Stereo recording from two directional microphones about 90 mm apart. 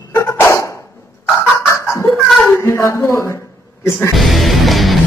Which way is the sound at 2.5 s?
30° left (ahead or behind).